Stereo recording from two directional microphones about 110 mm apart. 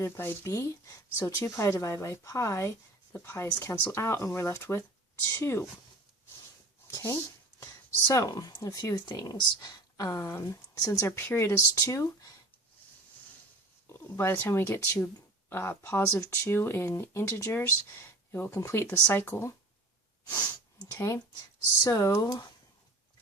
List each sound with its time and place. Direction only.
0.0 s speech: 25° left (ahead or behind)
6.8 s a sound: 25° left (ahead or behind)
8.0 s speech: 35° left (ahead or behind)
11.0 s speech: 20° left (ahead or behind)
13.8 s speech: 20° left (ahead or behind)
20.8 s speech: 25° left (ahead or behind)